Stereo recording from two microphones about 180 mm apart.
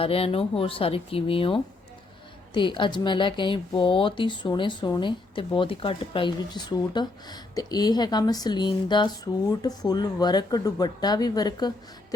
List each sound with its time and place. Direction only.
0.0 s speech: 30° left (ahead or behind)